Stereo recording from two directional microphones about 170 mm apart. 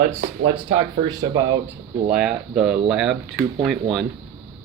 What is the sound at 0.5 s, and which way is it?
Speech, 25° right (ahead or behind).